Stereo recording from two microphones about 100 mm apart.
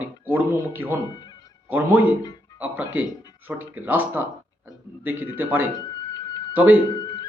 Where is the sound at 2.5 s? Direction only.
15° right (ahead or behind).